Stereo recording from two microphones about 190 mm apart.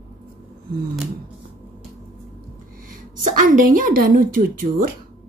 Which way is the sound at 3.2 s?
45° right (ahead or behind).